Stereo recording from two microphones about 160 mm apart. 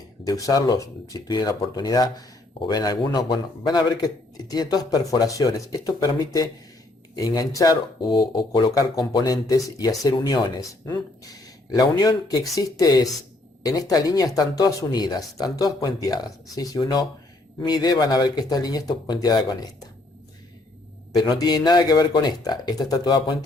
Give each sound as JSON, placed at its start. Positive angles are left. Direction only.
{"t": 0.3, "sound": "speech", "side_deg": 20}
{"t": 21.2, "sound": "speech", "side_deg": 25}